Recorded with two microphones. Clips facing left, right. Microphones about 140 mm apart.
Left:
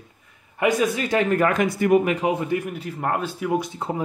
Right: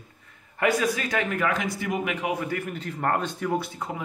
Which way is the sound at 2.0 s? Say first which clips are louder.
Left 5 dB; 35° left (ahead or behind).